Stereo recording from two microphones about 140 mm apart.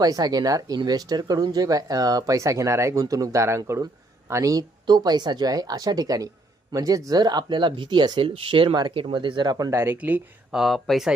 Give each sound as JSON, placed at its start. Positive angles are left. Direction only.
{"t": 0.0, "sound": "speech", "side_deg": -25}
{"t": 10.5, "sound": "speech", "side_deg": 0}